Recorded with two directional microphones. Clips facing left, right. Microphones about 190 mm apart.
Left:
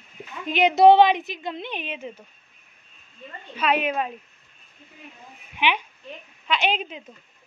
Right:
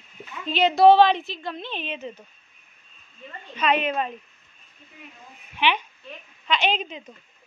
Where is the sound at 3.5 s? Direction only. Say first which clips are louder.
Even; 5° left (ahead or behind).